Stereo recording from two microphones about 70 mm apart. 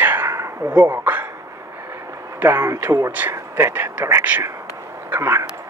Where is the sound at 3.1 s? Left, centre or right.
Right.